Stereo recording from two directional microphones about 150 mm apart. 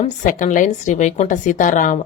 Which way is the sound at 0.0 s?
55° left (ahead or behind).